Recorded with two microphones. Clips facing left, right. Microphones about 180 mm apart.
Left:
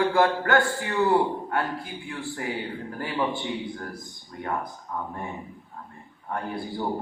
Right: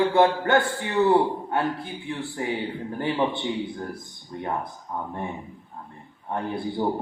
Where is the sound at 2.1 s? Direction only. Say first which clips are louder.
Right 3 dB; 25° right (ahead or behind).